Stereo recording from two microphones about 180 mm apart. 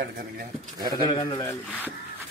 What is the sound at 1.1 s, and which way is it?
Speech, 20° left (ahead or behind).